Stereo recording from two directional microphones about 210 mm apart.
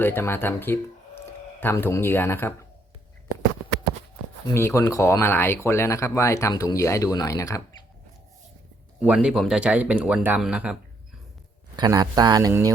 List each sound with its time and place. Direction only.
0.0 s speech: 10° left (ahead or behind)
4.5 s speech: 15° left (ahead or behind)
9.0 s speech: 5° right (ahead or behind)
11.8 s speech: 20° right (ahead or behind)